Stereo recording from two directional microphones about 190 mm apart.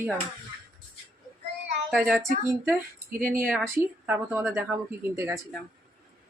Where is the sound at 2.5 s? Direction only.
15° right (ahead or behind).